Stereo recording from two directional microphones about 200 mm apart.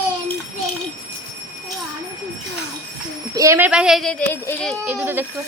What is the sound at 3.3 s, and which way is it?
Speech, 15° right (ahead or behind).